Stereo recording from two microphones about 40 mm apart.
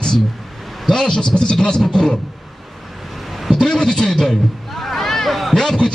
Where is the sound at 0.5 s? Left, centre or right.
Centre.